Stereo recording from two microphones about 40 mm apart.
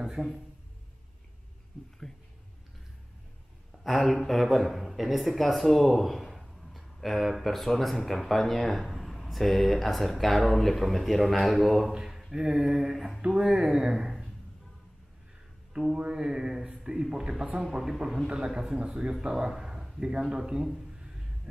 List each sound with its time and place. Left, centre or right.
0.0 s speech: centre
3.8 s speech: centre
11.9 s a sound: centre
12.3 s a man's voice: centre
13.9 s a sound: centre
15.7 s a man's voice: right